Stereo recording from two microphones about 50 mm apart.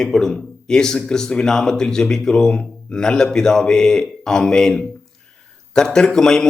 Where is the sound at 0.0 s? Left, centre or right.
Centre.